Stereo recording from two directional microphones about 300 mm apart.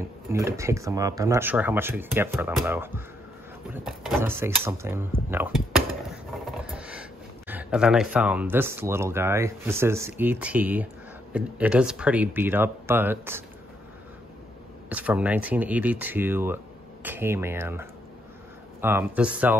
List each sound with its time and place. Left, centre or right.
0.3 s speech: centre
14.9 s speech: centre